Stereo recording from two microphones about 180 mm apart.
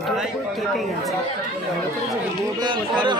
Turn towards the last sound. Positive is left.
turn(degrees=-25)  # may be behind; listen again after turning